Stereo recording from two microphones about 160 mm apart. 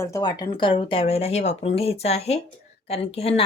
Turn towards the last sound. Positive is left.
turn(degrees=40)  # may be behind; listen again after turning